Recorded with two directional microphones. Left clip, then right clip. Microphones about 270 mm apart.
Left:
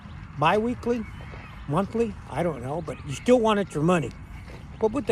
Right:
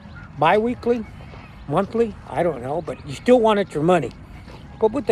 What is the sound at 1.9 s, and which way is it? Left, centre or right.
Speech, right.